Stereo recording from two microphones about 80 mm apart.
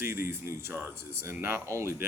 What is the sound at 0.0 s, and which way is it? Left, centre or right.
Speech, right.